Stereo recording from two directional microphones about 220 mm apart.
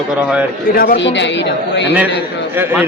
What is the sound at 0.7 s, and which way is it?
A man's voice, 40° left (ahead or behind).